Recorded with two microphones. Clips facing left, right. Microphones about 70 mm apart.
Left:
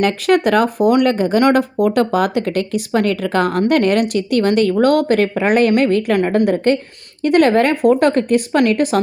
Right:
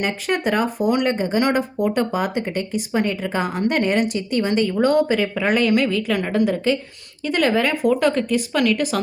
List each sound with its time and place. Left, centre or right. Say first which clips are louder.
0.0 s speech: left 8 dB; left
1.0 s speech: left 6 dB; left